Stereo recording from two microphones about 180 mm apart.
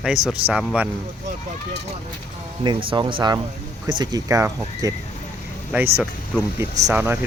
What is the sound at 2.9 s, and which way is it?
Speech, 30° right (ahead or behind).